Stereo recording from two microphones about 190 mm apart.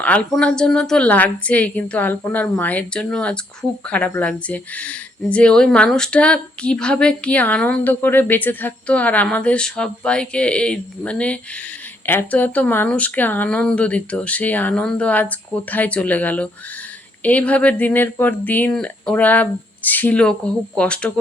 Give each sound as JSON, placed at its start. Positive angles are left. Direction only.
{"t": 0.0, "sound": "speech", "side_deg": 5}